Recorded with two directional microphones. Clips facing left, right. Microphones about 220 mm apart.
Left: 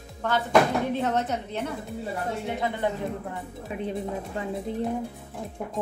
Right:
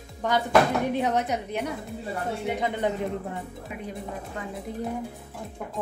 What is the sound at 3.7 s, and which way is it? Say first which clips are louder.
Speech: left 6 dB; 30° left (ahead or behind).